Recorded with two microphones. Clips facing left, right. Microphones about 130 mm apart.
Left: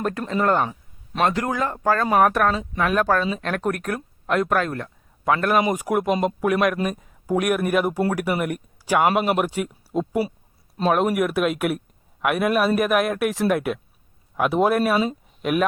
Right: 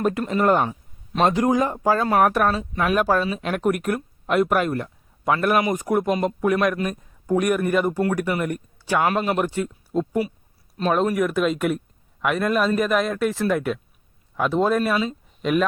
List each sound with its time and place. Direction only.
0.0 s a man's voice: 10° right (ahead or behind)